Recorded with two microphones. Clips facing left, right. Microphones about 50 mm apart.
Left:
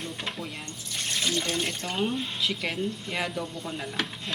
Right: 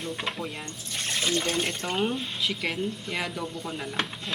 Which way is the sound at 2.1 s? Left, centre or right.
Centre.